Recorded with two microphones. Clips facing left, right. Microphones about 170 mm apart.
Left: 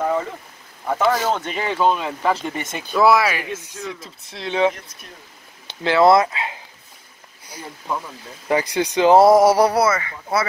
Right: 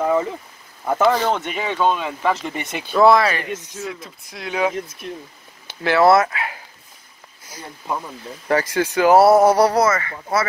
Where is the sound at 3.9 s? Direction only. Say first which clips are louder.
Even; 25° left (ahead or behind).